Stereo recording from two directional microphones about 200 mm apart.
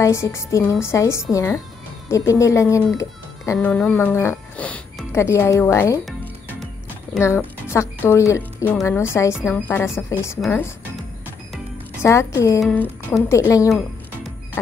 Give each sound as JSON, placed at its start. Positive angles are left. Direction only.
{"t": 0.0, "sound": "speech", "side_deg": 15}
{"t": 7.2, "sound": "speech", "side_deg": 15}
{"t": 12.0, "sound": "speech", "side_deg": 15}
{"t": 13.7, "sound": "music", "side_deg": 0}